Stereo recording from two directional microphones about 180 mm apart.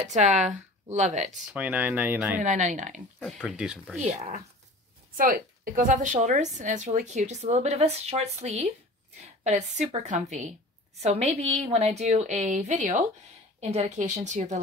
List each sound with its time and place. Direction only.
0.1 s a woman's voice: 40° right (ahead or behind)
1.5 s speech: 10° right (ahead or behind)
2.4 s speech: 45° right (ahead or behind)
3.2 s speech: 5° left (ahead or behind)
4.0 s a woman's voice: 40° right (ahead or behind)
5.1 s a woman's voice: 50° right (ahead or behind)